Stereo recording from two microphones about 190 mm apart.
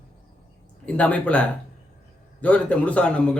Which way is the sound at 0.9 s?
5° left (ahead or behind).